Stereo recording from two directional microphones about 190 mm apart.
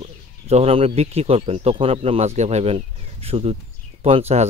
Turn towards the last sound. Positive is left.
turn(degrees=-35)  # may be behind; listen again after turning